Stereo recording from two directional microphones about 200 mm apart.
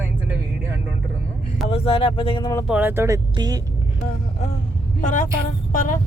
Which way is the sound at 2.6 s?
10° right (ahead or behind).